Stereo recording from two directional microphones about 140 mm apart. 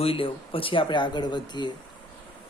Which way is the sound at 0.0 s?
40° left (ahead or behind).